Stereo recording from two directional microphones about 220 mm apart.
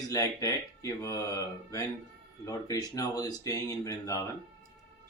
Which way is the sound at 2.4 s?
15° left (ahead or behind).